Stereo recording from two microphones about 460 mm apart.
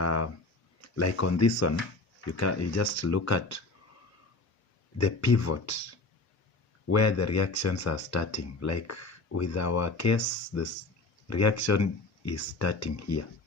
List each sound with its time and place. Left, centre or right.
0.0 s a sound: left
0.8 s speech: left
4.9 s speech: left
6.9 s speech: left